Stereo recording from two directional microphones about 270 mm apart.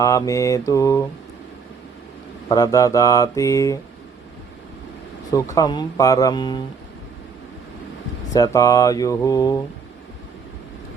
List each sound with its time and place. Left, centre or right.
0.0 s mantra: centre
2.5 s mantra: centre
5.5 s mantra: centre
8.3 s mantra: centre